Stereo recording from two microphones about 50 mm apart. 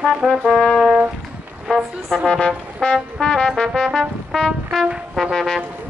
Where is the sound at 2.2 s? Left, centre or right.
Centre.